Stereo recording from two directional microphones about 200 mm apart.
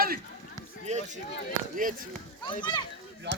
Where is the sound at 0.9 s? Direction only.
35° right (ahead or behind).